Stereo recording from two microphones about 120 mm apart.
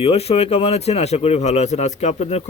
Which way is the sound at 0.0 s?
55° left (ahead or behind).